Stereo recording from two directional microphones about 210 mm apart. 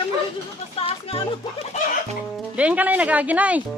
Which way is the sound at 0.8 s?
30° left (ahead or behind).